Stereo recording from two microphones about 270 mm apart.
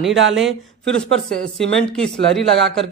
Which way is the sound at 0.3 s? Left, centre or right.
Centre.